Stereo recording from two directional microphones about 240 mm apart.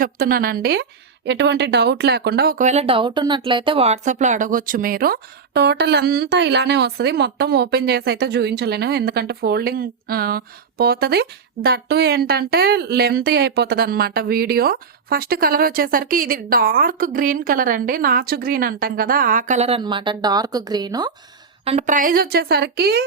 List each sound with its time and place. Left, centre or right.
0.0 s a woman's voice: right